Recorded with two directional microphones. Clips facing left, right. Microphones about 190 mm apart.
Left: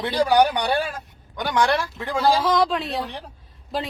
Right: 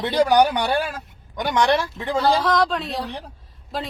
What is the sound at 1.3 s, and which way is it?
Speech, 20° right (ahead or behind).